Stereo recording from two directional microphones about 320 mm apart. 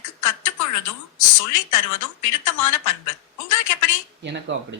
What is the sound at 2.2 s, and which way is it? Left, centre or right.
Speech, left.